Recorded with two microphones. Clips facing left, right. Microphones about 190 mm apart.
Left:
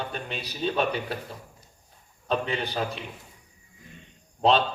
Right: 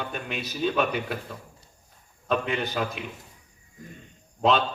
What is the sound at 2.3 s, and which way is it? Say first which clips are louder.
Speech: right 1 dB; 35° left (ahead or behind).